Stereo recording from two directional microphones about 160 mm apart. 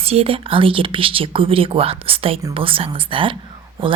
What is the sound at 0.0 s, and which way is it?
Speech, 40° right (ahead or behind).